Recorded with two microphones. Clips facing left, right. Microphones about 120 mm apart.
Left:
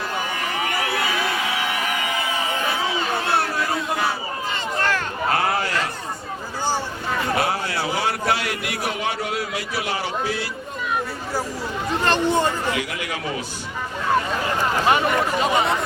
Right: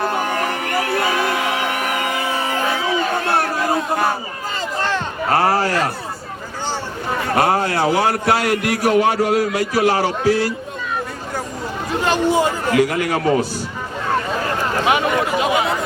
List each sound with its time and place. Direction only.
0.0 s a sound: 50° right (ahead or behind)
3.1 s crowd: 45° right (ahead or behind)
4.8 s a sound: 30° right (ahead or behind)
7.3 s a man's voice: 50° right (ahead or behind)
12.0 s speech: 5° right (ahead or behind)
12.7 s a man's voice: 45° right (ahead or behind)
14.8 s speech: 5° right (ahead or behind)